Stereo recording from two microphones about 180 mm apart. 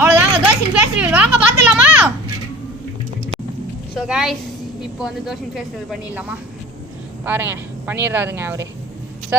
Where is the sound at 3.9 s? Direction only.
Centre (ahead or behind).